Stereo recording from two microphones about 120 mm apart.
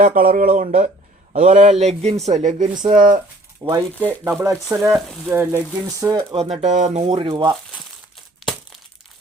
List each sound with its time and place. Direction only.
0.0 s speech: 90° right
1.8 s speech: 65° right (ahead or behind); by 2.6 s 90° right
3.6 s speech: 30° right (ahead or behind)
4.0 s speech: 15° right (ahead or behind)
6.3 s speech: 60° right (ahead or behind); by 7.0 s 85° right
7.0 s speech: 50° right (ahead or behind)